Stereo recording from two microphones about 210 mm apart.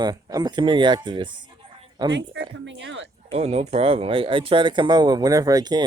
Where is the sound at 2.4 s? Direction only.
60° right (ahead or behind).